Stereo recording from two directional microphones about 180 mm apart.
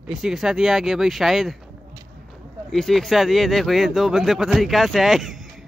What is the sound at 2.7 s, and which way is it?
Speech, centre (ahead or behind).